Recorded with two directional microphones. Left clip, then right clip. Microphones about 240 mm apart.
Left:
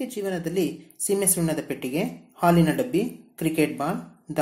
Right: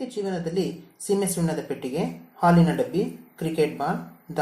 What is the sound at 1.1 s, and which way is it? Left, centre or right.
Speech, left.